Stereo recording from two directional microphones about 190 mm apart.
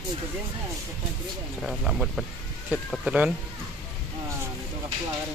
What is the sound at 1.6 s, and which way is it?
Speech, centre (ahead or behind).